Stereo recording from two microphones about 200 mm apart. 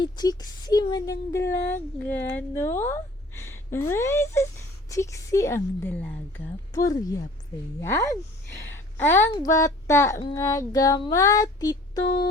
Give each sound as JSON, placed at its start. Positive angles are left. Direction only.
{"t": 0.0, "sound": "a woman's voice", "side_deg": 20}